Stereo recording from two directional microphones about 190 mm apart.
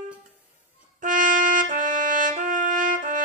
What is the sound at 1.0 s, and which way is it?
Brass instrument, 45° right (ahead or behind).